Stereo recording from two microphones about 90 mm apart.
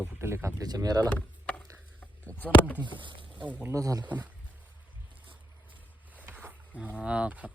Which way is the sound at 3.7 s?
40° right (ahead or behind).